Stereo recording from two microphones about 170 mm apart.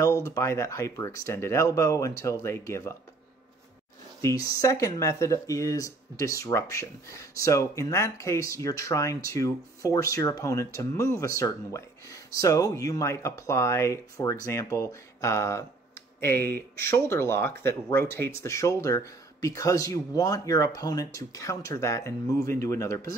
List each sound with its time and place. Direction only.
0.0 s speech: 20° left (ahead or behind)
4.2 s speech: 20° left (ahead or behind)